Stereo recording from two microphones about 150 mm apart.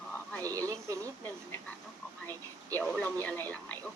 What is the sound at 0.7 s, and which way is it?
Speech, 20° right (ahead or behind).